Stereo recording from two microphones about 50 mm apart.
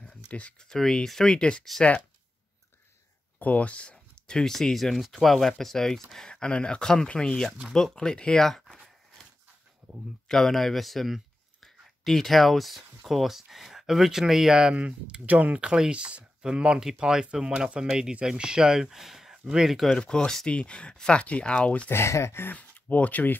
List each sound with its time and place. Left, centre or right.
0.0 s a sound: left
0.6 s speech: centre
3.3 s speech: left
8.5 s a sound: centre
10.2 s speech: centre
14.8 s speech: right
15.6 s speech: centre
17.5 s speech: right
17.7 s speech: centre
20.0 s speech: left
21.9 s speech: left
22.5 s speech: left